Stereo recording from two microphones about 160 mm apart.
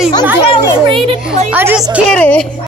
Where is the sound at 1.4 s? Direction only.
10° right (ahead or behind).